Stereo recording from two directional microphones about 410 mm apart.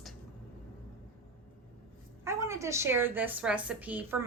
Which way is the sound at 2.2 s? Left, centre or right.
Centre.